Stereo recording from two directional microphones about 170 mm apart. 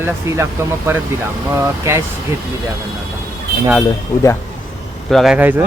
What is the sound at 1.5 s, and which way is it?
Speech, 15° right (ahead or behind).